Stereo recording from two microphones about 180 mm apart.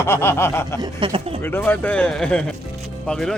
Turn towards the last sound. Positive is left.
turn(degrees=5)  # may be behind; listen again after turning